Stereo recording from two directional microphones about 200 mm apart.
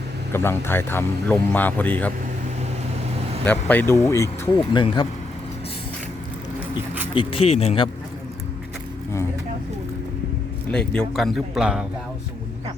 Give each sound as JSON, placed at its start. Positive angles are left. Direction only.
{"t": 0.3, "sound": "speech", "side_deg": 10}
{"t": 3.4, "sound": "speech", "side_deg": 10}
{"t": 6.7, "sound": "music", "side_deg": -10}
{"t": 7.1, "sound": "speech", "side_deg": 25}
{"t": 10.7, "sound": "speech", "side_deg": 5}